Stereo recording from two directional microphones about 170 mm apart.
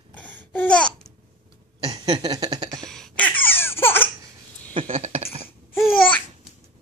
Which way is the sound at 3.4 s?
10° left (ahead or behind).